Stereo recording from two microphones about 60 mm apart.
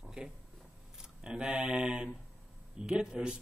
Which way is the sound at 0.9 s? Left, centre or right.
Centre.